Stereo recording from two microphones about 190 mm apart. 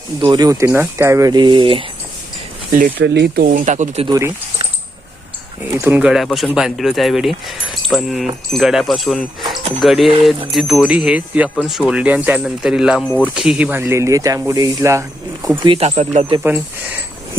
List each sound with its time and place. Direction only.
0.2 s speech: 20° right (ahead or behind)
2.7 s speech: 45° right (ahead or behind)
4.0 s speech: 20° right (ahead or behind)
5.7 s speech: 10° right (ahead or behind)
15.6 s speech: 30° right (ahead or behind)